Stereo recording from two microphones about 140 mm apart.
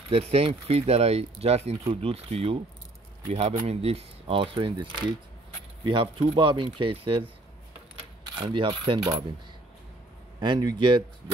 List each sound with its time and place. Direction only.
0.1 s speech: 45° right (ahead or behind)
8.4 s speech: 40° right (ahead or behind)
10.4 s speech: 30° right (ahead or behind)